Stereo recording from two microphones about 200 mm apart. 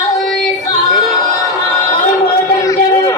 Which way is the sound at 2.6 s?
15° left (ahead or behind).